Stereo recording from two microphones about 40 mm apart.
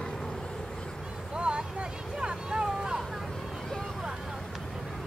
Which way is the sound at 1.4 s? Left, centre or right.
Right.